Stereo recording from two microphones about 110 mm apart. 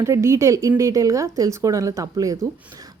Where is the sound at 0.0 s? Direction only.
25° right (ahead or behind).